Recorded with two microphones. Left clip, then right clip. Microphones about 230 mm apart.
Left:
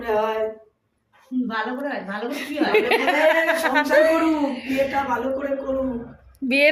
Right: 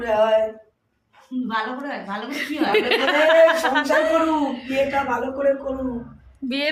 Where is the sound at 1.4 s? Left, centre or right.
Centre.